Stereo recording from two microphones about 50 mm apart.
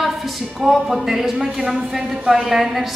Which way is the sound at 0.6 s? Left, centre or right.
Centre.